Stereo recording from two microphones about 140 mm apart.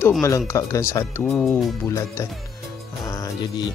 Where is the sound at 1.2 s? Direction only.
5° left (ahead or behind).